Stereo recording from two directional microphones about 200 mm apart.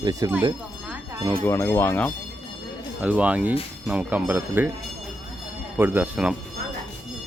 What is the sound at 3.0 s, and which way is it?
Speech, 5° right (ahead or behind).